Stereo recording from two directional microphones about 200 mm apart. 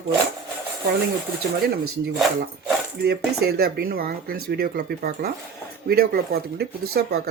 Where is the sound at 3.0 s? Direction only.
50° right (ahead or behind).